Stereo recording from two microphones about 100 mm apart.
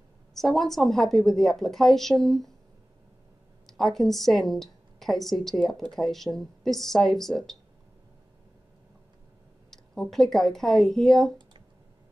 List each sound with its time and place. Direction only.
0.3 s a woman's voice: 5° left (ahead or behind)
3.6 s a woman's voice: centre (ahead or behind)
9.7 s speech: 5° left (ahead or behind)